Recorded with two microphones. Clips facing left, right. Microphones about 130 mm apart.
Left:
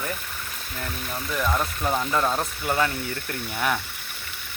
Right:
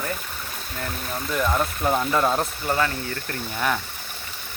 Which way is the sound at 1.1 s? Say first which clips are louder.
Right 2 dB; centre (ahead or behind).